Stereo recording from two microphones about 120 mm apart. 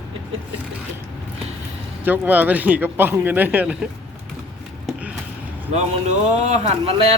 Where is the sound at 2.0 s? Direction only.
15° right (ahead or behind).